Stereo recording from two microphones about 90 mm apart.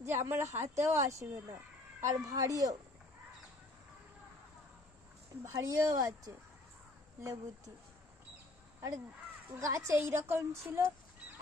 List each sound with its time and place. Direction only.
0.0 s speech: 25° right (ahead or behind)
5.4 s speech: 35° right (ahead or behind)
9.6 s speech: 35° right (ahead or behind)